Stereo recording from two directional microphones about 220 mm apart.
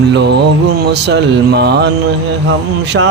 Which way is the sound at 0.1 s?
50° right (ahead or behind).